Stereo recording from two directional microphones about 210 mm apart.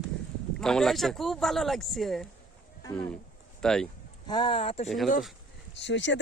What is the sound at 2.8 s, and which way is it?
Speech, 15° left (ahead or behind).